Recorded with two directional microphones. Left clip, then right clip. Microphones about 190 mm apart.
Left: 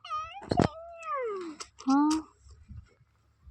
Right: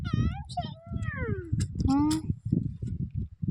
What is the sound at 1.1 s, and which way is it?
Cat, 50° left (ahead or behind).